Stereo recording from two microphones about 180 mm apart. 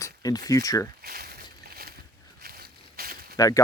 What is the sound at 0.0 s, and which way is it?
Speech, 20° left (ahead or behind).